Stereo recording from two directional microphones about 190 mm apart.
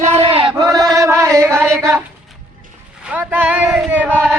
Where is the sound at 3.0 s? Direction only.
10° right (ahead or behind).